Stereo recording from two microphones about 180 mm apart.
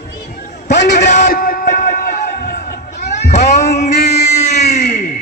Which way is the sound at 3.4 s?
40° left (ahead or behind).